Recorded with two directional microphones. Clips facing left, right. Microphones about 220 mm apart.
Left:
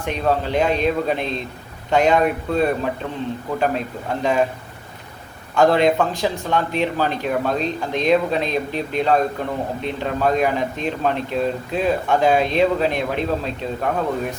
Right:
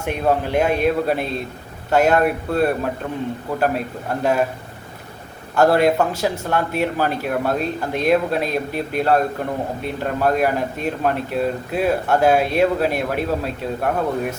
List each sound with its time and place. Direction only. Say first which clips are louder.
0.0 s speech: right 1 dB; 10° right (ahead or behind)
5.5 s speech: even; 5° right (ahead or behind)